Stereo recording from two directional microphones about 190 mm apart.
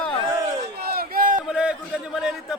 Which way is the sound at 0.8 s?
55° right (ahead or behind).